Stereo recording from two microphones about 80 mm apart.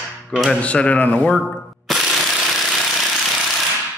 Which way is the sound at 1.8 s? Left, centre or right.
Centre.